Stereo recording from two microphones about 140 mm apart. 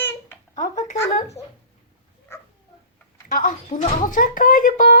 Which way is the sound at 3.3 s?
70° left (ahead or behind).